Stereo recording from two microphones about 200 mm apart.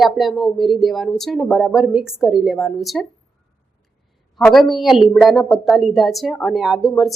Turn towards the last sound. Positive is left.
turn(degrees=0)  # may be behind; listen again after turning